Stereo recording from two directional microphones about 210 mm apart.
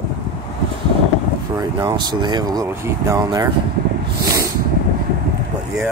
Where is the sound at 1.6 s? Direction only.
20° right (ahead or behind).